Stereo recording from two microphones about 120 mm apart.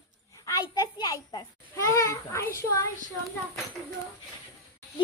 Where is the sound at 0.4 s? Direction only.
30° left (ahead or behind).